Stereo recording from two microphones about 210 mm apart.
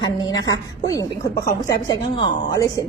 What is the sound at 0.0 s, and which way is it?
A woman's voice, 20° left (ahead or behind).